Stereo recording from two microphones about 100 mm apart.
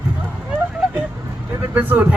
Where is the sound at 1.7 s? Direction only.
20° right (ahead or behind).